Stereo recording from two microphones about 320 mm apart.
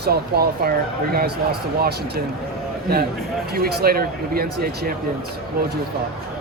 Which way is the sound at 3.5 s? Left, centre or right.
Right.